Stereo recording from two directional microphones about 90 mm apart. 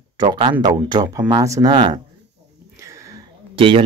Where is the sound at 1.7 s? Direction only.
60° right (ahead or behind).